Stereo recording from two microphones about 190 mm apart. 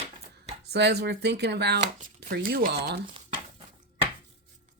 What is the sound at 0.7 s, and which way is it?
Speech, 60° right (ahead or behind).